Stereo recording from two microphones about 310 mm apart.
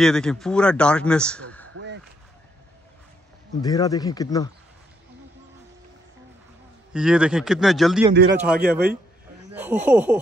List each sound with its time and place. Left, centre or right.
0.0 s a man's voice: centre
1.7 s a sound: right
3.6 s speech: centre
6.9 s a man's voice: centre
8.1 s speech: right
9.5 s a man's voice: centre